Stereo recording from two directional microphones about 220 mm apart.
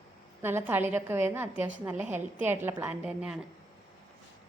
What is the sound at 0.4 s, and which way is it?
A woman's voice, 10° right (ahead or behind).